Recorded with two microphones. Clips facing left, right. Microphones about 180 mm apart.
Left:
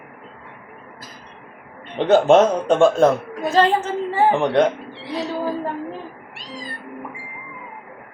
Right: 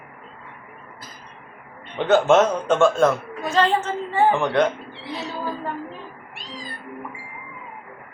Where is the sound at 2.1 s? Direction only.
35° left (ahead or behind).